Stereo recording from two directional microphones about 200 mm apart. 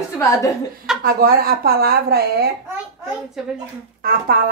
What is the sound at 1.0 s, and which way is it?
Speech, 50° right (ahead or behind).